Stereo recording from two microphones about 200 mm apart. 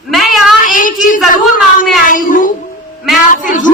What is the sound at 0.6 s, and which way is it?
Child singing, 40° left (ahead or behind).